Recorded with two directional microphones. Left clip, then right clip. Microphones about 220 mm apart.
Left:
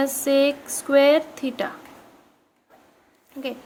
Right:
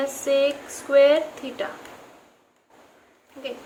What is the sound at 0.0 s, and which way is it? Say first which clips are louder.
A woman's voice: left 2 dB; 45° left (ahead or behind).